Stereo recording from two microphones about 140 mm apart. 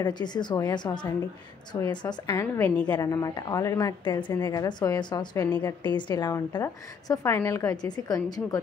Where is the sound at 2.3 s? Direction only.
20° left (ahead or behind).